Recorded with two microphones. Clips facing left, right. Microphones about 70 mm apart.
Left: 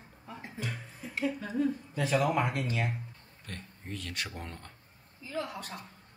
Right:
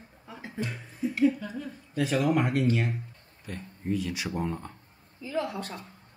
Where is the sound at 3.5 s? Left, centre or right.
Centre.